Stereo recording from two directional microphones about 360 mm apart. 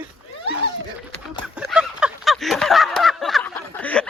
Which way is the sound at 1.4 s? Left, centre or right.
Centre.